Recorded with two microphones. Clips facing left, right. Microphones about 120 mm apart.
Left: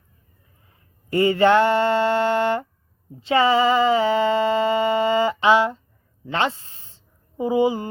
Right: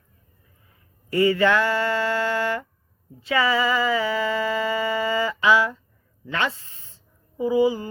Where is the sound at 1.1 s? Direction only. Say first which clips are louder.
Left 3 dB; 30° left (ahead or behind).